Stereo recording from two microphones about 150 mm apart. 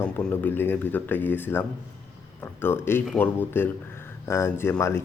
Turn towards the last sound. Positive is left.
turn(degrees=15)  # may be behind; listen again after turning